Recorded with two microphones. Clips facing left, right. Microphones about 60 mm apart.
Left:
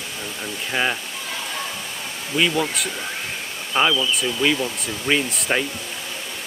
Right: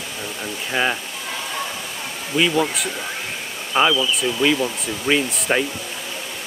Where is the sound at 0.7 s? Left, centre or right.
Centre.